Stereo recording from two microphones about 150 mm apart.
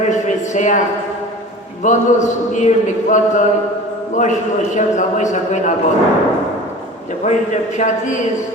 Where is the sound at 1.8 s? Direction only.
55° left (ahead or behind).